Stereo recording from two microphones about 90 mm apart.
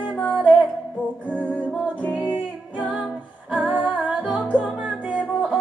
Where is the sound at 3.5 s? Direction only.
15° right (ahead or behind).